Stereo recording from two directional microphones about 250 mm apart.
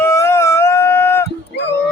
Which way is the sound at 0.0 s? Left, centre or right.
Centre.